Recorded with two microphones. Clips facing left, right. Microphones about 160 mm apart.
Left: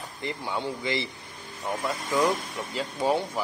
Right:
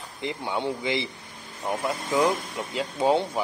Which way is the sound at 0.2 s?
20° right (ahead or behind).